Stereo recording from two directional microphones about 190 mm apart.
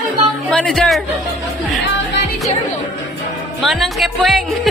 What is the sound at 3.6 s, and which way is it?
Speech, centre (ahead or behind).